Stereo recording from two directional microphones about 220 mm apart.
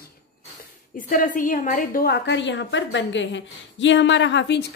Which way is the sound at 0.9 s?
40° left (ahead or behind).